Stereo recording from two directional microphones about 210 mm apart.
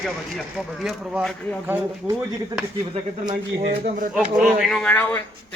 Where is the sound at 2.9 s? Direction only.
25° right (ahead or behind).